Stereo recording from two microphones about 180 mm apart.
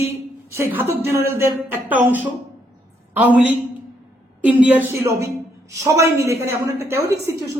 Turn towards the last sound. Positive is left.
turn(degrees=-15)  # may be behind; listen again after turning